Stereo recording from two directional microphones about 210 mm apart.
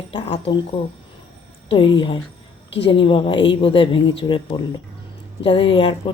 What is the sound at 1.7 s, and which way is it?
Speech, 25° left (ahead or behind).